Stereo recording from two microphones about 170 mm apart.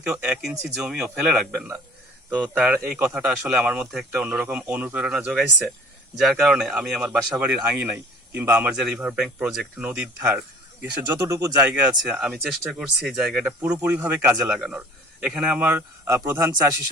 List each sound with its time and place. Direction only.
0.0 s speech: 5° right (ahead or behind)
11.3 s speech: 20° right (ahead or behind)
11.7 s speech: 5° right (ahead or behind)